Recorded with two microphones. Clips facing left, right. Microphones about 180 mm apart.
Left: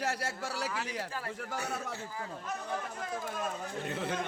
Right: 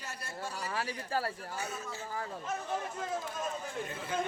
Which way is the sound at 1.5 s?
65° left (ahead or behind).